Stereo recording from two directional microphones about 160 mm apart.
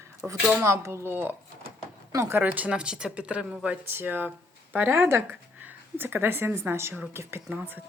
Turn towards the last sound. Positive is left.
turn(degrees=-10)  # may be behind; listen again after turning